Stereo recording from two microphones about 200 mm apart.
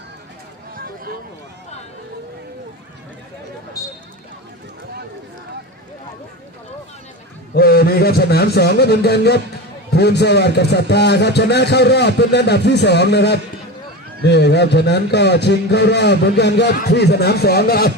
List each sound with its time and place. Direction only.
7.5 s a man's voice: 50° left (ahead or behind)